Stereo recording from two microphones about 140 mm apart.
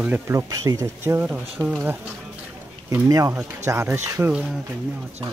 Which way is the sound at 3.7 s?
15° right (ahead or behind).